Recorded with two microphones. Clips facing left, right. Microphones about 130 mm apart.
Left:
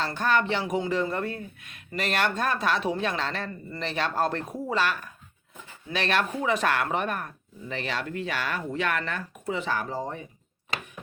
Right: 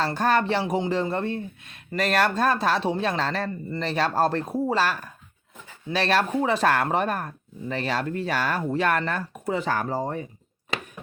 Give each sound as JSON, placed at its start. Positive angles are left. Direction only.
{"t": 0.0, "sound": "speech", "side_deg": -40}